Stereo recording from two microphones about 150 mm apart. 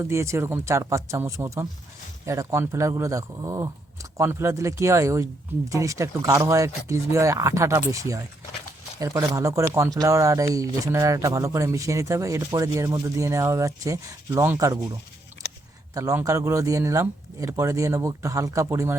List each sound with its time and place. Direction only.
0.0 s speech: 20° right (ahead or behind)
16.0 s speech: 20° right (ahead or behind)